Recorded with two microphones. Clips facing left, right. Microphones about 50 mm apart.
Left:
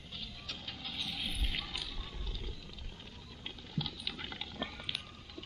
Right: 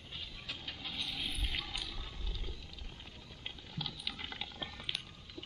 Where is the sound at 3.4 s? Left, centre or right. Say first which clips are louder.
Left 3 dB; centre.